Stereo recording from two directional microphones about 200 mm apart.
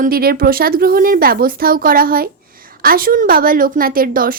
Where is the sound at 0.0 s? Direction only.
50° right (ahead or behind).